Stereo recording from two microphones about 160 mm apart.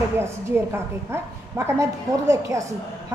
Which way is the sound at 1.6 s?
20° right (ahead or behind).